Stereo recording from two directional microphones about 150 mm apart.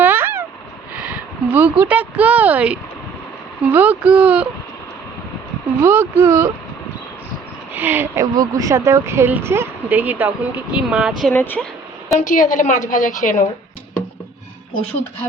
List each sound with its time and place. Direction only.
0.0 s a sound: 15° right (ahead or behind)
1.8 s speech: 10° right (ahead or behind)
5.8 s speech: 15° right (ahead or behind)
7.7 s speech: 10° right (ahead or behind)
11.2 s speech: 10° left (ahead or behind)
12.2 s a woman's voice: 60° left (ahead or behind)